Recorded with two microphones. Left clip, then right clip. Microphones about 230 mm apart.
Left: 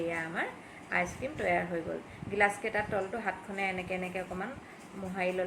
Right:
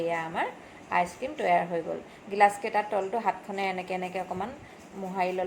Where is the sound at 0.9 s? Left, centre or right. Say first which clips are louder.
Right 5 dB; centre.